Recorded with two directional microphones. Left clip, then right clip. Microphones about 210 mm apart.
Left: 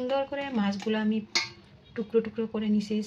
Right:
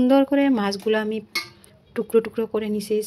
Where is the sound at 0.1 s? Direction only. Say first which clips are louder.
Right 11 dB; 45° right (ahead or behind).